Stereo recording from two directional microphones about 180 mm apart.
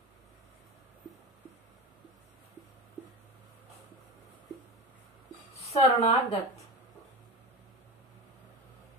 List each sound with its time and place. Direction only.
5.6 s speech: 35° left (ahead or behind)